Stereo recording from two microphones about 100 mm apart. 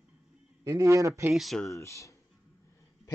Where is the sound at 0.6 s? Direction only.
35° right (ahead or behind).